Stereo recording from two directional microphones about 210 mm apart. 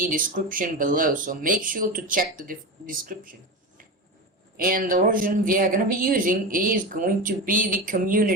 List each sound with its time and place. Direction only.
0.0 s speech: 40° right (ahead or behind)
4.5 s speech: 40° right (ahead or behind)